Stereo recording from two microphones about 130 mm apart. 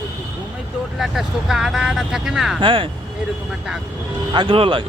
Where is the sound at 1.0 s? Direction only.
Centre (ahead or behind).